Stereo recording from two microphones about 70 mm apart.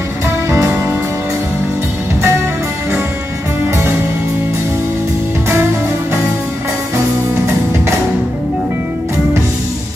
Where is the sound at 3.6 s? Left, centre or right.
Right.